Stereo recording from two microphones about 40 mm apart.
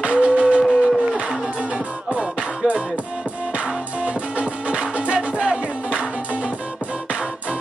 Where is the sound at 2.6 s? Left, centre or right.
Right.